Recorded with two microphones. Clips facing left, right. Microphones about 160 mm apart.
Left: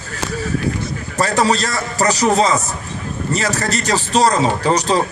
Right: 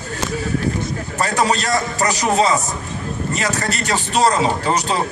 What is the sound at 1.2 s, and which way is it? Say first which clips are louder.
Speech: left 3 dB; 40° left (ahead or behind).